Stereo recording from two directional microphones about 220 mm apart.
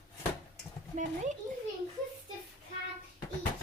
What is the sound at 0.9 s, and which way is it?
Speech, 35° right (ahead or behind).